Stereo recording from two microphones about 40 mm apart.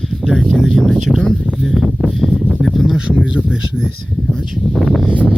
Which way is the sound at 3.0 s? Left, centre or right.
Right.